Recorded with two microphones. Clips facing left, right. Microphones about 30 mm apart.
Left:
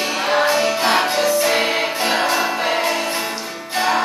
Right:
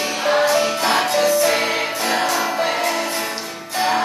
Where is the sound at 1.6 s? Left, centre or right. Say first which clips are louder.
Left 2 dB; left.